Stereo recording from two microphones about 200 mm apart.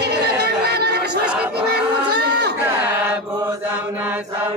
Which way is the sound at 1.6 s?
55° right (ahead or behind).